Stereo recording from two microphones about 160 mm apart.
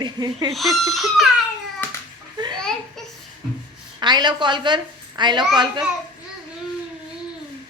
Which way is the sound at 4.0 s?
25° right (ahead or behind).